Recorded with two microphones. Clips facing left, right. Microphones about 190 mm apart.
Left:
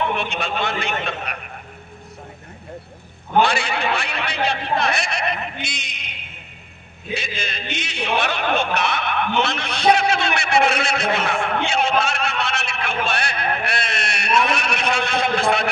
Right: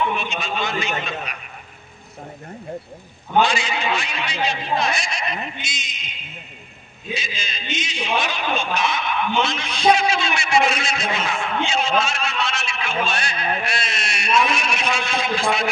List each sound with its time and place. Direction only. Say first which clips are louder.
0.0 s speech: left 1 dB; 60° left (ahead or behind)
3.4 s speech: left 1 dB; 60° left (ahead or behind)